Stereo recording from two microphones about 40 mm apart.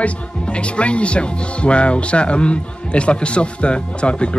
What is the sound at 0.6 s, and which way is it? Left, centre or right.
Speech, left.